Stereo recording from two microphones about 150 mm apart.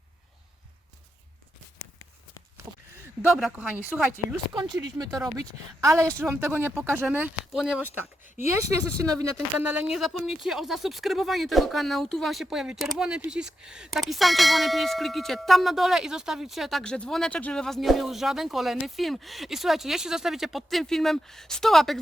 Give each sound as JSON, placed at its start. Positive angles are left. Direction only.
{"t": 3.2, "sound": "speech", "side_deg": -5}
{"t": 4.5, "sound": "speech", "side_deg": -30}
{"t": 8.9, "sound": "speech", "side_deg": 5}
{"t": 9.6, "sound": "speech", "side_deg": -10}